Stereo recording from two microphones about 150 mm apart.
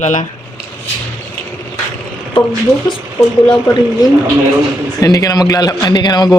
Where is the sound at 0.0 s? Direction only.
50° left (ahead or behind).